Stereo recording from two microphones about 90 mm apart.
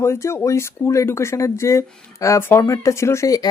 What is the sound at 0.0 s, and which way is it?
Speech, 30° left (ahead or behind).